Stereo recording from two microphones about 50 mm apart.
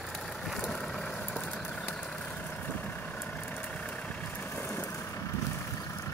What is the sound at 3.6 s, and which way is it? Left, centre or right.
Vehicle, left.